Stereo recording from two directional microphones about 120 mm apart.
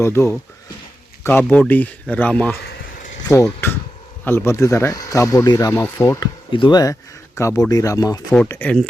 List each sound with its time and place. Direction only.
0.0 s speech: 20° left (ahead or behind)
3.2 s speech: 25° left (ahead or behind)
6.5 s speech: 40° left (ahead or behind)
7.3 s speech: 25° left (ahead or behind)
8.4 s speech: 15° left (ahead or behind)